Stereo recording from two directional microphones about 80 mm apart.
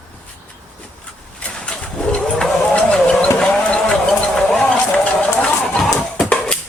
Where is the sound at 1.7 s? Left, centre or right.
Centre.